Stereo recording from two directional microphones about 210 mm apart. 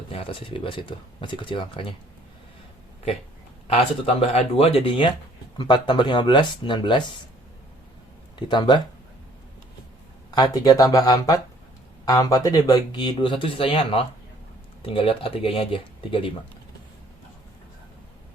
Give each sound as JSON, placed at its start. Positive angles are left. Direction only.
{"t": 0.1, "sound": "speech", "side_deg": 25}
{"t": 3.7, "sound": "speech", "side_deg": 30}
{"t": 8.4, "sound": "speech", "side_deg": 20}
{"t": 10.3, "sound": "speech", "side_deg": 20}